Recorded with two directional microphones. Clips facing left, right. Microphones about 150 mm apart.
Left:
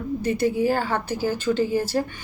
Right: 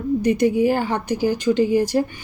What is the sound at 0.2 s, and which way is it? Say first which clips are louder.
A woman's voice: right 4 dB; 15° right (ahead or behind).